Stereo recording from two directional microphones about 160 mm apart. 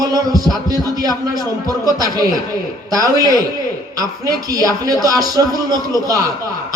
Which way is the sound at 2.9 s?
25° right (ahead or behind).